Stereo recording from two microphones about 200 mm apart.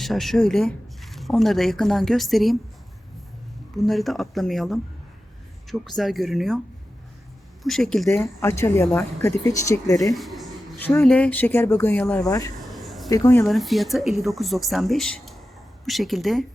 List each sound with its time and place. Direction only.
0.0 s speech: centre (ahead or behind)
3.8 s speech: centre (ahead or behind)
7.6 s speech: centre (ahead or behind)
8.1 s speech: 15° left (ahead or behind)
10.2 s speech: centre (ahead or behind); by 12.5 s 15° left (ahead or behind)
12.7 s a sound: centre (ahead or behind)
13.1 s speech: 15° left (ahead or behind)
13.5 s speech: centre (ahead or behind)